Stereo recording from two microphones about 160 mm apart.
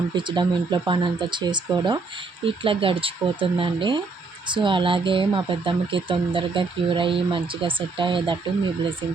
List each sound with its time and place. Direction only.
0.1 s speech: 30° right (ahead or behind)